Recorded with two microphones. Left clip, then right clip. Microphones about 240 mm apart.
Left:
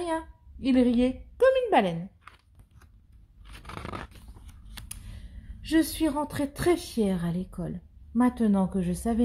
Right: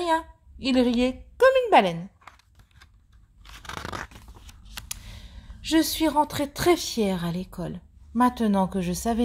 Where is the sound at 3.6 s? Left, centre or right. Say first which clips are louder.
Right 5 dB; right.